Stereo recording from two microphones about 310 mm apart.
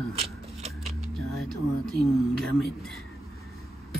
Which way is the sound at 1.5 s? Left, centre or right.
Centre.